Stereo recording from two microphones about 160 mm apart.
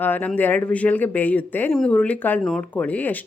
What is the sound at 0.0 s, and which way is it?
A woman's voice, 10° left (ahead or behind).